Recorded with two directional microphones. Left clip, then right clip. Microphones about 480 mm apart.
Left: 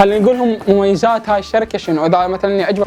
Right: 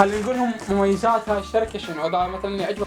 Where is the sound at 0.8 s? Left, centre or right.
Left.